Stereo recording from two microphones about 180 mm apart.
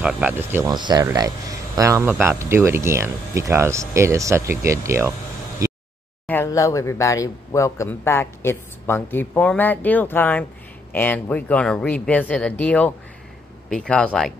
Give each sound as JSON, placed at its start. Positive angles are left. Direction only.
{"t": 0.0, "sound": "speech", "side_deg": -10}
{"t": 5.6, "sound": "a sound", "side_deg": -20}
{"t": 6.2, "sound": "speech", "side_deg": 15}